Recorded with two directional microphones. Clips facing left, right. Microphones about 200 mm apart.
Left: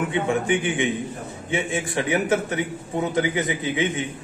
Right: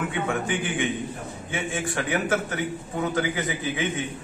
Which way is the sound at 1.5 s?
20° left (ahead or behind).